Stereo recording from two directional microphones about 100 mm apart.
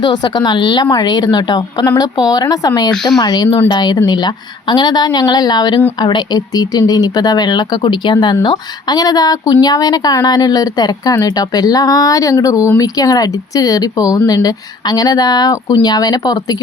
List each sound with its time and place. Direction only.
0.0 s speech: 45° left (ahead or behind)
2.9 s speech: 5° left (ahead or behind)
3.2 s speech: 45° left (ahead or behind)